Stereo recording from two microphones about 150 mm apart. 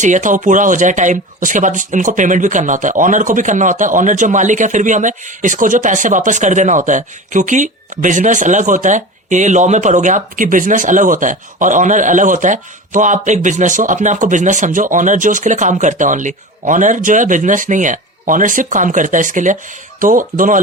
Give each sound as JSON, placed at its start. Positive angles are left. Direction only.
{"t": 0.0, "sound": "speech", "side_deg": -55}